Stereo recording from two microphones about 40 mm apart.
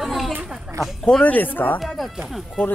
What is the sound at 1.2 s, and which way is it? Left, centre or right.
Speech, left.